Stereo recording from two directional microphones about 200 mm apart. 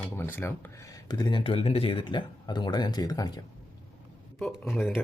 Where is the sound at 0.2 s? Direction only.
10° left (ahead or behind).